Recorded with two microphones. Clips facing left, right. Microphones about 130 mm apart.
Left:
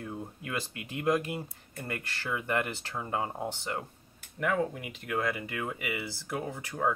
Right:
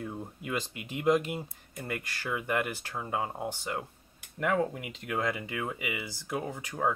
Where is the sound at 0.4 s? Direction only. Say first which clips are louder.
Right 5 dB; 20° right (ahead or behind).